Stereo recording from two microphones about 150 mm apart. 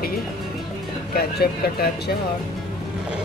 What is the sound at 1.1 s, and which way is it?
Speech, 90° left.